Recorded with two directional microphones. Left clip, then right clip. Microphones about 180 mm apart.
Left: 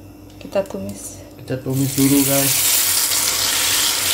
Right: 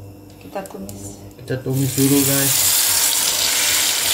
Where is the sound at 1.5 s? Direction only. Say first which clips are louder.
Even; centre (ahead or behind).